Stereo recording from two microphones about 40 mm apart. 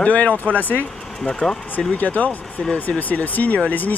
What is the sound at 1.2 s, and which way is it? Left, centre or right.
Speech, centre.